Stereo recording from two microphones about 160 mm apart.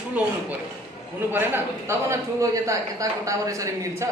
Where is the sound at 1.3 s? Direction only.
15° right (ahead or behind).